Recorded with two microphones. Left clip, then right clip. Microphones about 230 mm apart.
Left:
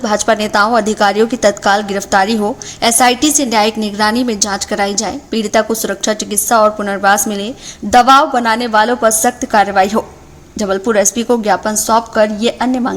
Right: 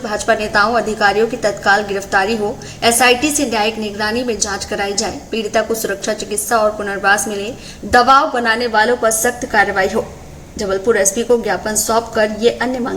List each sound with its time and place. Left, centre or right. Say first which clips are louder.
0.0 s a woman's voice: left 3 dB; left